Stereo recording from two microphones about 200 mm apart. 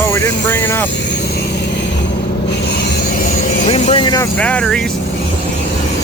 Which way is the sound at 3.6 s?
30° left (ahead or behind).